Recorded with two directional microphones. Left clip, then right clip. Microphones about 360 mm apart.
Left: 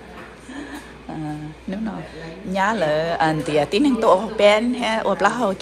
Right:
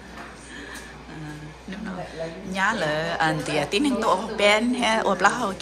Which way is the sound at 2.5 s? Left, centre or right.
Centre.